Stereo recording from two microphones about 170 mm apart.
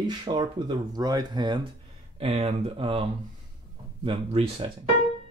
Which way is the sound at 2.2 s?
40° right (ahead or behind).